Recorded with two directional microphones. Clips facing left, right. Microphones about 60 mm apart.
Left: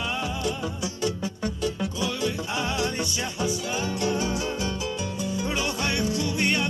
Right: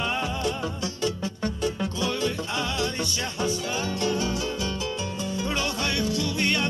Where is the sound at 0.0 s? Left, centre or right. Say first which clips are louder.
Right 2 dB; right.